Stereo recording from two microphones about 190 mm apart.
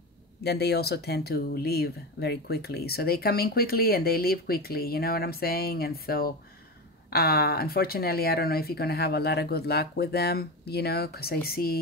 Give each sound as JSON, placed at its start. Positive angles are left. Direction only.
{"t": 0.4, "sound": "speech", "side_deg": 60}